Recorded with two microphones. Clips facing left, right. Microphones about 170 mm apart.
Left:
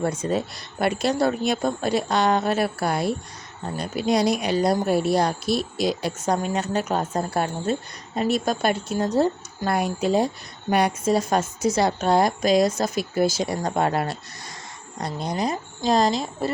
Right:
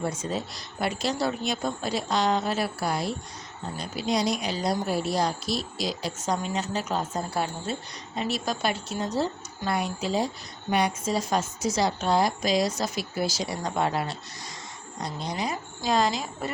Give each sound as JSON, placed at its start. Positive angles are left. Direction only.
{"t": 0.0, "sound": "a woman's voice", "side_deg": 60}